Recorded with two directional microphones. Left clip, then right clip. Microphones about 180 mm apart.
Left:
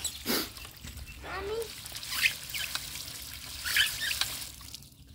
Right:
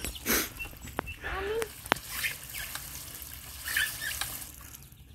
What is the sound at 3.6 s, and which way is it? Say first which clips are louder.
Rodents: left 3 dB; centre (ahead or behind).